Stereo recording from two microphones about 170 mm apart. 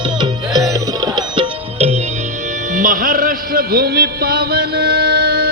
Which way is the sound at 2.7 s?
50° right (ahead or behind).